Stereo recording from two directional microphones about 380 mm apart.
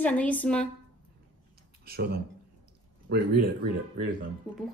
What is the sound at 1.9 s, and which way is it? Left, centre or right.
Speech, right.